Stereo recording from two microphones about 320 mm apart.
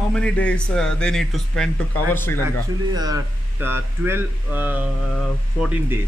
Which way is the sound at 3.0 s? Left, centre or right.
Centre.